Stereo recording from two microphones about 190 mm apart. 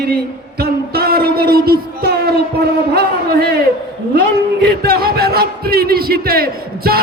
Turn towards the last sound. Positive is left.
turn(degrees=-55)  # may be behind; listen again after turning